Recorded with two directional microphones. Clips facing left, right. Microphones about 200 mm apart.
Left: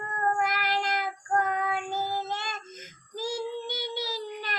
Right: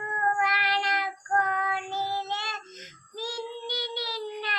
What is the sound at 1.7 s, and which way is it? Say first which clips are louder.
Child singing: left 1 dB; 50° left (ahead or behind).